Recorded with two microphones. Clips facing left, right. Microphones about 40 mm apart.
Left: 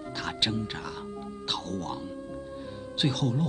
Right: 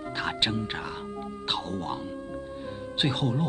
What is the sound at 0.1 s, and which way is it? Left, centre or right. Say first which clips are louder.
Speech: right 2 dB; right.